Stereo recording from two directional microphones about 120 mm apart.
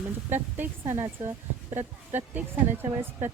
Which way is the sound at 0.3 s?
15° right (ahead or behind).